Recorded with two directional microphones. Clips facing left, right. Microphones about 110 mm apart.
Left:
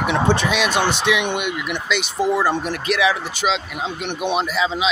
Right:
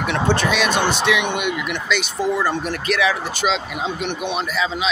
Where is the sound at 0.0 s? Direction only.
15° left (ahead or behind).